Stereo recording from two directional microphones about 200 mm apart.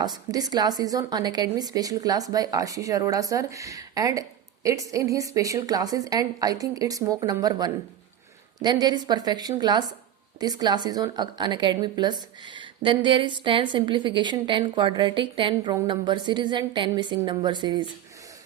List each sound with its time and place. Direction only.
0.0 s a woman's voice: 20° right (ahead or behind)